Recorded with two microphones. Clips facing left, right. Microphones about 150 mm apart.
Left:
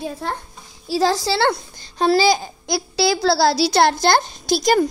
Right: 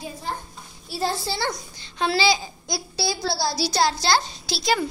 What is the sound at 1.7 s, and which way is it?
Speech, 40° left (ahead or behind).